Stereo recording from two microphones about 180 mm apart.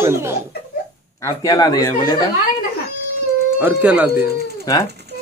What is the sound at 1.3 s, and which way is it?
Speech, 20° left (ahead or behind).